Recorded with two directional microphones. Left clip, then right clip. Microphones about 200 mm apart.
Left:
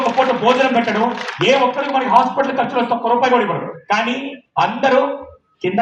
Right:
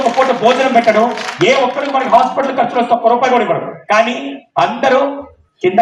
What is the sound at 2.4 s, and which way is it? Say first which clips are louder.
Speech: right 4 dB; 40° right (ahead or behind).